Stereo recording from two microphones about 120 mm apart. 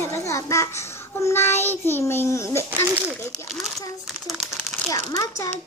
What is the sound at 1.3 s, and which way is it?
Child singing, 20° left (ahead or behind).